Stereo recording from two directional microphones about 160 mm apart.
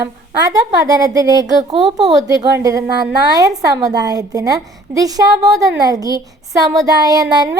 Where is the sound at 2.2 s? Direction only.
20° right (ahead or behind).